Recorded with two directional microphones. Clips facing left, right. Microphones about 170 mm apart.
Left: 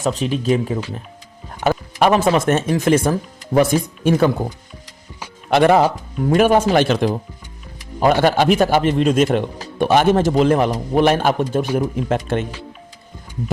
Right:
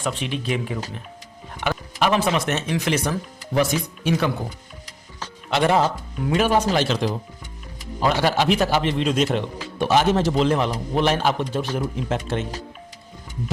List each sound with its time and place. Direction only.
0.0 s speech: 40° left (ahead or behind)
5.5 s speech: 60° left (ahead or behind)